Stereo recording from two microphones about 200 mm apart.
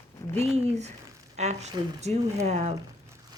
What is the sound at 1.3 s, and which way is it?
A woman's voice, 35° right (ahead or behind).